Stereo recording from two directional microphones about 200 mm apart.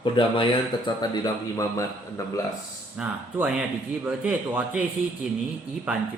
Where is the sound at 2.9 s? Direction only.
5° right (ahead or behind).